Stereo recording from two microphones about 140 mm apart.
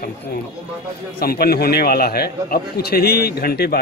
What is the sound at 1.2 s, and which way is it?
A man's voice, 90° left.